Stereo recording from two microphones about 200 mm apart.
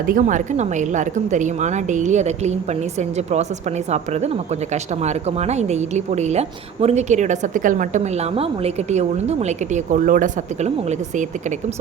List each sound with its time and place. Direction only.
0.0 s a woman's voice: 45° right (ahead or behind)